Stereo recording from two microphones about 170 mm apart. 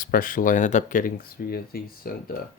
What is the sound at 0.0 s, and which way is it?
Speech, 55° left (ahead or behind).